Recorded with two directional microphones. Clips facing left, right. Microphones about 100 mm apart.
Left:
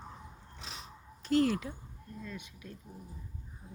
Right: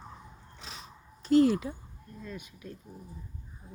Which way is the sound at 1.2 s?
20° right (ahead or behind).